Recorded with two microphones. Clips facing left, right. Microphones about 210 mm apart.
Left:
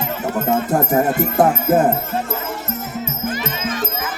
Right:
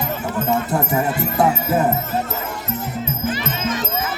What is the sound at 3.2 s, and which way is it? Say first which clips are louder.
Music: right 1 dB; 50° left (ahead or behind).